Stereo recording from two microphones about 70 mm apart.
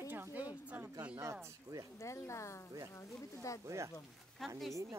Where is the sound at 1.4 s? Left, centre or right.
Right.